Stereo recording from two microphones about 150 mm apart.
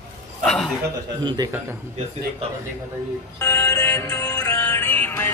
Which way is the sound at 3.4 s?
20° left (ahead or behind).